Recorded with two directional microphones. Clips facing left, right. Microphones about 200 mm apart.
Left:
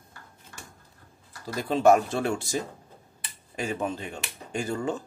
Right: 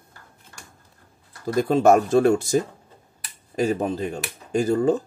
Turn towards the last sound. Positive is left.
turn(degrees=-40)  # may be behind; listen again after turning